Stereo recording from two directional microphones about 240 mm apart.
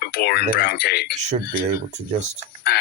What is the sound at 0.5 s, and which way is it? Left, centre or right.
Speech, left.